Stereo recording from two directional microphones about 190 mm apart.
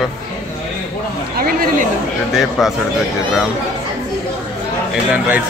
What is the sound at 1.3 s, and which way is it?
Chatter, 50° right (ahead or behind).